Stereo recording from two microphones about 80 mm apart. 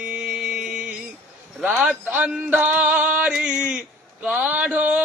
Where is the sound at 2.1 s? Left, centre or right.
Centre.